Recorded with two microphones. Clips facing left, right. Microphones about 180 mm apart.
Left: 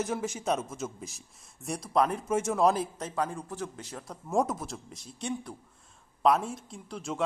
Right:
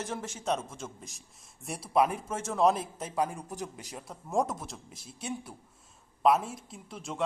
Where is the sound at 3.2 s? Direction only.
15° right (ahead or behind).